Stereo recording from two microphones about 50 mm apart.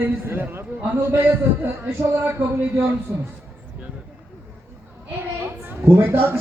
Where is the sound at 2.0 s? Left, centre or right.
Right.